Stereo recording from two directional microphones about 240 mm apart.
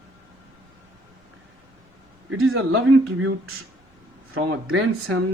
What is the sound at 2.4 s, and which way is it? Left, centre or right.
Speech, right.